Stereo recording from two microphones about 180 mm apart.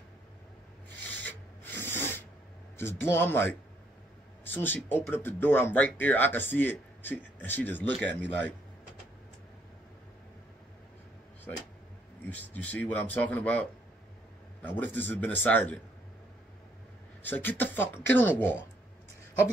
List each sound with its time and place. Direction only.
1.0 s rub: 10° left (ahead or behind)
2.8 s speech: 15° left (ahead or behind)
12.3 s speech: 10° left (ahead or behind)
17.2 s speech: 10° left (ahead or behind)